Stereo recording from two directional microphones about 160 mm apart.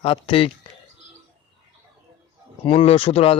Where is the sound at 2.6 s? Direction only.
35° left (ahead or behind).